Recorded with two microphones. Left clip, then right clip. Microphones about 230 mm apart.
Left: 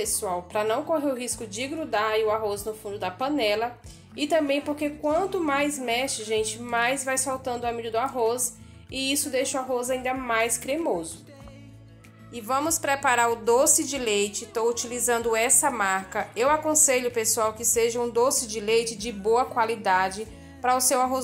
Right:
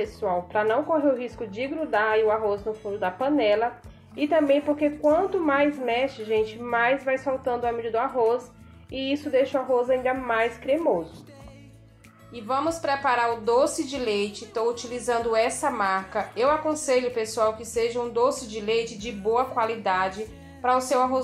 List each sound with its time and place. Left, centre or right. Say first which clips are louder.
0.0 s a woman's voice: right 2 dB; centre
12.8 s a woman's voice: left 2 dB; left